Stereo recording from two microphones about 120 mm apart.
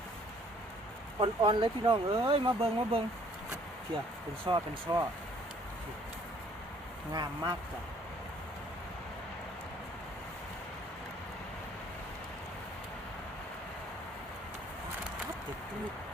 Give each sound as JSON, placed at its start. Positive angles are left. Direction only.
{"t": 1.4, "sound": "speech", "side_deg": -40}
{"t": 4.4, "sound": "speech", "side_deg": -40}
{"t": 7.1, "sound": "speech", "side_deg": -35}